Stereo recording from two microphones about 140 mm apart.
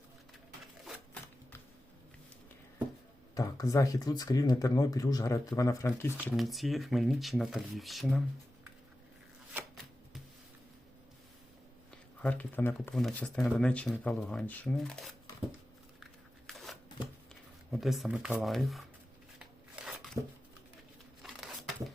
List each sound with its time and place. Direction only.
3.3 s speech: 25° left (ahead or behind)
6.3 s speech: centre (ahead or behind)
12.2 s speech: 10° left (ahead or behind)
12.9 s speech: 5° left (ahead or behind)
16.5 s shuffling cards: centre (ahead or behind)
17.7 s speech: centre (ahead or behind)
19.4 s a sound: 5° right (ahead or behind)
21.2 s a sound: centre (ahead or behind)